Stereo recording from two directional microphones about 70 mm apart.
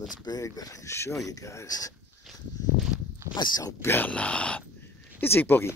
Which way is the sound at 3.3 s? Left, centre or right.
Left.